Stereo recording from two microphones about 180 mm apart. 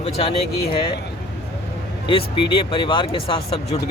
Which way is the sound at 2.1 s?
30° left (ahead or behind).